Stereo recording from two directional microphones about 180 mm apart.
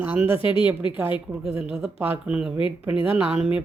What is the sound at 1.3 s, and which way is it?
A woman's voice, 10° right (ahead or behind).